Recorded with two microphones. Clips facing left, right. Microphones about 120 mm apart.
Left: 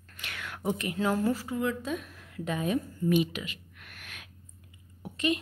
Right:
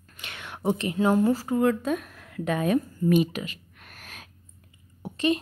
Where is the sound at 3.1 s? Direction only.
45° right (ahead or behind).